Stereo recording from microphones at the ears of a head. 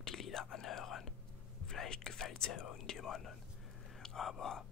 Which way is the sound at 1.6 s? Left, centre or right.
Left.